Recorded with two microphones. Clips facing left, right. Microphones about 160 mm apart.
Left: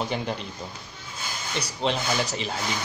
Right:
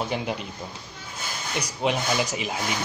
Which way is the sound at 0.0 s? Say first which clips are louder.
Right 1 dB; 5° right (ahead or behind).